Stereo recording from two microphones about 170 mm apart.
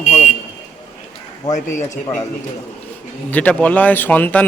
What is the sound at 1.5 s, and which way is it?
Speech, 45° left (ahead or behind).